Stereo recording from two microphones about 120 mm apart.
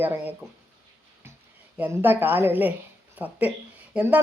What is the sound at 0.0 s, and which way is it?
Speech, 15° right (ahead or behind).